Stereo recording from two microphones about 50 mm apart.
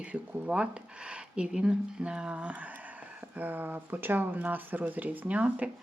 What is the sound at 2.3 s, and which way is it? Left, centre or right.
Speech, right.